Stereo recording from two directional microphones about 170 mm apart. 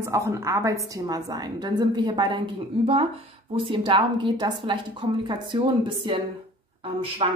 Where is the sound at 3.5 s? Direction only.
30° right (ahead or behind).